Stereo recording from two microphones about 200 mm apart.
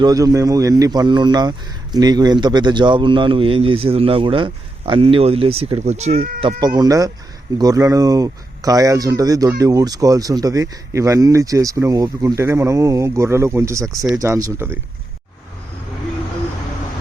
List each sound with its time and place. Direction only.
0.0 s speech: 20° right (ahead or behind); by 6.4 s 40° right (ahead or behind)
6.7 s speech: 20° right (ahead or behind)